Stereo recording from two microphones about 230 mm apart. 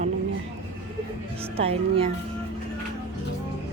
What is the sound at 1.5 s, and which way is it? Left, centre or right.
Speech, right.